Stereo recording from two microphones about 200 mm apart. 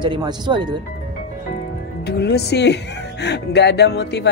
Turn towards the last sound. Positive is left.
turn(degrees=55)  # may be behind; listen again after turning